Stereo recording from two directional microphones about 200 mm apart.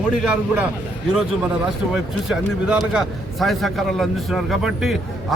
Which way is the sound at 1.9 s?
5° right (ahead or behind).